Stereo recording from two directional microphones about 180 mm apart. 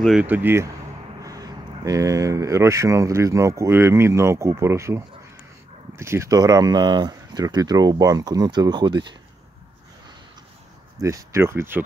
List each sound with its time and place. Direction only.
0.0 s speech: 5° right (ahead or behind); by 9.0 s 25° right (ahead or behind)
11.0 s speech: 15° right (ahead or behind)